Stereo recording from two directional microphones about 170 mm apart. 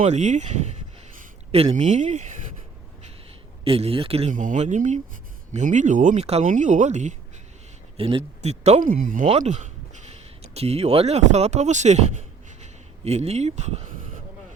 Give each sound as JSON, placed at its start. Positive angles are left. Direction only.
{"t": 0.0, "sound": "speech", "side_deg": -40}
{"t": 3.6, "sound": "speech", "side_deg": -35}
{"t": 4.3, "sound": "speech", "side_deg": -50}